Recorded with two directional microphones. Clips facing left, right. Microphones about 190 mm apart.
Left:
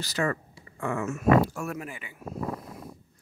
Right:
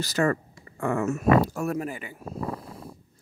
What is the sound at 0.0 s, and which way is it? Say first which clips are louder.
Speech: right 4 dB; 45° right (ahead or behind).